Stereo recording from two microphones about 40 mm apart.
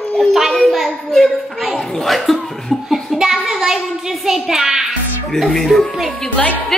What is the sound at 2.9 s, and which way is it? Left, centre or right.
Child singing, centre.